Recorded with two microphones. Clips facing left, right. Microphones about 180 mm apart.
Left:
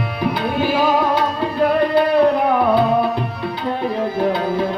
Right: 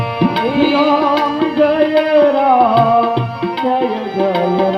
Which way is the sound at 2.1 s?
90° right.